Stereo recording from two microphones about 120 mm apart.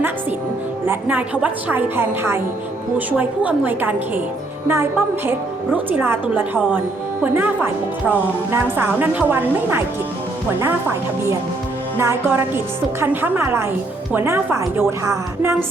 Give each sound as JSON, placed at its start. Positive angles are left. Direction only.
{"t": 0.9, "sound": "a woman's voice", "side_deg": -15}